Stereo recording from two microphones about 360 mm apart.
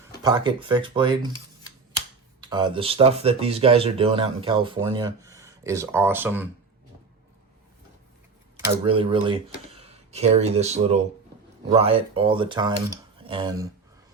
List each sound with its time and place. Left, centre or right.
0.2 s speech: centre
2.4 s speech: centre
8.6 s speech: centre